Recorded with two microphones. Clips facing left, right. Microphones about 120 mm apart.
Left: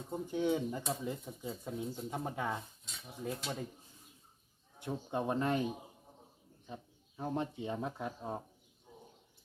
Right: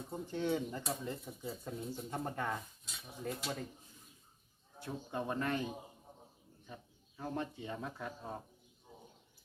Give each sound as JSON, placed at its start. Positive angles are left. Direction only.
{"t": 0.3, "sound": "speech", "side_deg": 15}
{"t": 0.9, "sound": "speech", "side_deg": 0}
{"t": 4.8, "sound": "speech", "side_deg": 20}
{"t": 7.2, "sound": "speech", "side_deg": 20}